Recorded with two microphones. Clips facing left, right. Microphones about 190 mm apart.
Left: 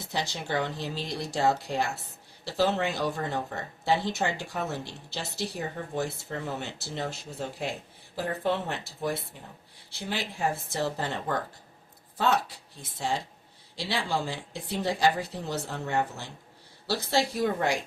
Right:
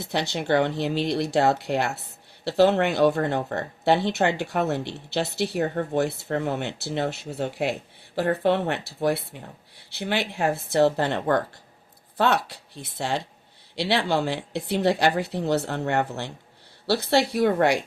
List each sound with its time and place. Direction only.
0.1 s speech: 70° right (ahead or behind)